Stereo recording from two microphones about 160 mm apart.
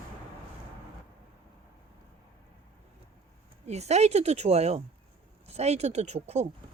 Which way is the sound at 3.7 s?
45° right (ahead or behind).